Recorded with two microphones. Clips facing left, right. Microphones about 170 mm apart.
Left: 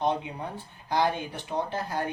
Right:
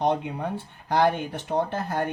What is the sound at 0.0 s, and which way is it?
Speech, 60° right (ahead or behind).